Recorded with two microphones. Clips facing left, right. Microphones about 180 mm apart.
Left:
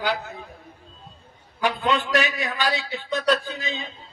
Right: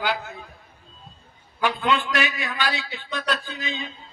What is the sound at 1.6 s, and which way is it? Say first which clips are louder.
A man's voice: even; 40° left (ahead or behind).